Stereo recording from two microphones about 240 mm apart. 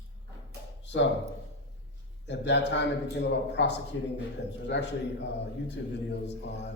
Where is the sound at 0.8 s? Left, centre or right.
Left.